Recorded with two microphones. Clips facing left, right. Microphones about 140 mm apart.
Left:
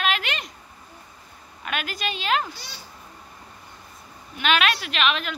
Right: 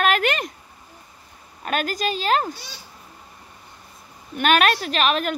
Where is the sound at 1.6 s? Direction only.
40° right (ahead or behind).